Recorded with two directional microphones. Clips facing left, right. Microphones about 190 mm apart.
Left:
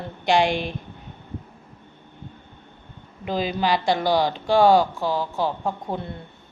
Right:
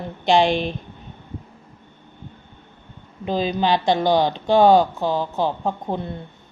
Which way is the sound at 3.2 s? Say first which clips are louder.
Right 3 dB; 20° right (ahead or behind).